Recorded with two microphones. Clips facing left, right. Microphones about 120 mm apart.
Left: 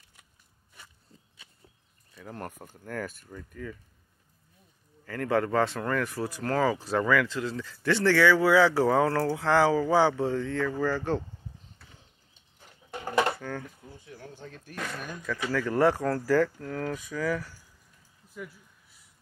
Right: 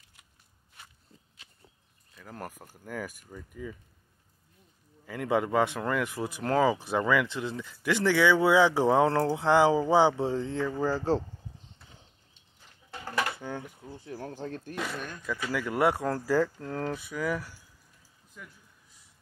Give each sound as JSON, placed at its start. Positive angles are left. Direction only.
{"t": 2.1, "sound": "speech", "side_deg": 0}
{"t": 5.0, "sound": "speech", "side_deg": -15}
{"t": 13.4, "sound": "a sound", "side_deg": -20}
{"t": 13.8, "sound": "speech", "side_deg": -40}
{"t": 14.8, "sound": "speech", "side_deg": -5}